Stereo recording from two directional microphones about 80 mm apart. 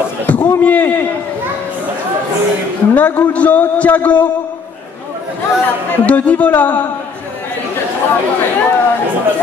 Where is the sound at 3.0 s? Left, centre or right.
Centre.